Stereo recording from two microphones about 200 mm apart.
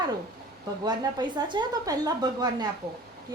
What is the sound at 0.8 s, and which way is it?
Speech, 20° right (ahead or behind).